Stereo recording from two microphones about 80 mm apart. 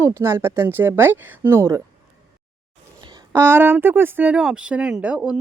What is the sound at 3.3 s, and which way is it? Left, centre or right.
Speech, right.